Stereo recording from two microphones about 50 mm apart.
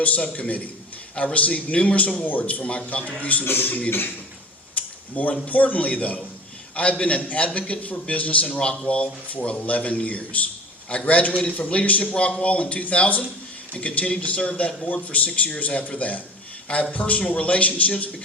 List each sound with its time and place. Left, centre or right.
0.0 s a man's voice: left
3.4 s a man's voice: left
4.7 s a sound: left
5.5 s a man's voice: left